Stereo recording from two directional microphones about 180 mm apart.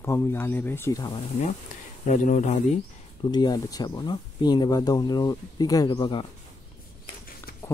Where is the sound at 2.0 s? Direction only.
45° left (ahead or behind).